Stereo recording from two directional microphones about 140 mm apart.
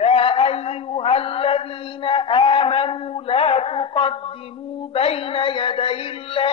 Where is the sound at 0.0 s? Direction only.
45° left (ahead or behind).